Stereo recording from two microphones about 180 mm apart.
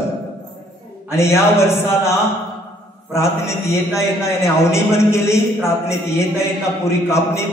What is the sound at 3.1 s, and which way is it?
A man's voice, 15° left (ahead or behind).